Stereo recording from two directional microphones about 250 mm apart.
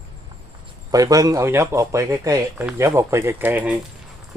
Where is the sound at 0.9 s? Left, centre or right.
Centre.